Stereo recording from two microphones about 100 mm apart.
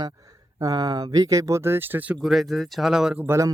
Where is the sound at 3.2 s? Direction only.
30° right (ahead or behind).